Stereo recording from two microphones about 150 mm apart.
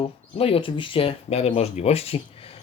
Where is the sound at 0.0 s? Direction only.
40° left (ahead or behind).